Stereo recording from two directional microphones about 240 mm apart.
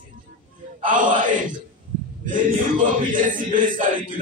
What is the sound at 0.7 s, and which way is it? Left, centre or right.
Music, right.